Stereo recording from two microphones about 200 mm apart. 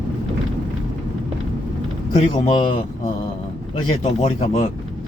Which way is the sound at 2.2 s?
30° left (ahead or behind).